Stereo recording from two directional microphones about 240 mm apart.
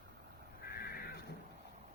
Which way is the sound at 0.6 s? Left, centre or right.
Left.